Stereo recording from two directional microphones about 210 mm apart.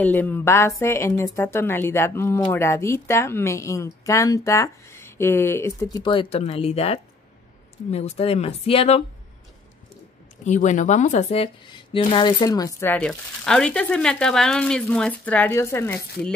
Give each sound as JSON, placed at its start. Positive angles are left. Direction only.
{"t": 0.0, "sound": "speech", "side_deg": 10}
{"t": 10.4, "sound": "speech", "side_deg": 35}